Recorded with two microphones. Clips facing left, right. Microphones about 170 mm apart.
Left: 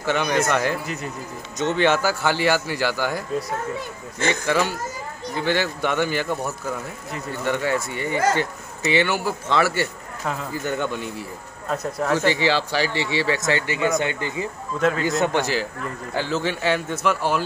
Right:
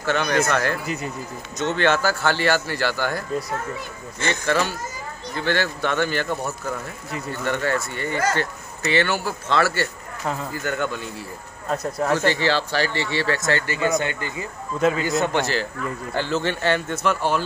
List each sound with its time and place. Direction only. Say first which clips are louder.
0.0 s speech: even; 15° left (ahead or behind)
1.8 s speech: even; 15° left (ahead or behind)
4.3 s a man's voice: even; 15° left (ahead or behind)
11.7 s speech: right 1 dB; 5° right (ahead or behind)
12.2 s speech: left 1 dB; 15° left (ahead or behind)
14.8 s speech: right 1 dB; 5° right (ahead or behind)
15.2 s speech: left 1 dB; 10° left (ahead or behind)